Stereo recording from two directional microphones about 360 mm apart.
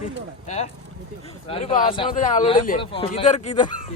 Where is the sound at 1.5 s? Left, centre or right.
Left.